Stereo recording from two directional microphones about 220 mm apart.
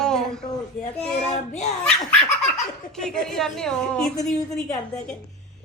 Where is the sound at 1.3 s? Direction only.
30° left (ahead or behind).